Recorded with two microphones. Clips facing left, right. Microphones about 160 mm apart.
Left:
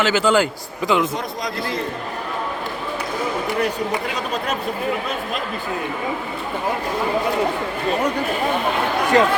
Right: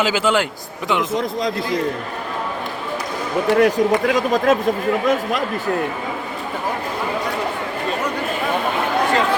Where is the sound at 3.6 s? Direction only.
90° right.